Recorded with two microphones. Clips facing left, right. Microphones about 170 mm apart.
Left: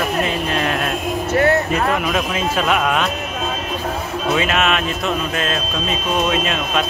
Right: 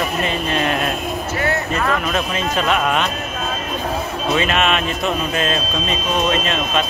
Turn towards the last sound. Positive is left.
turn(degrees=5)  # may be behind; listen again after turning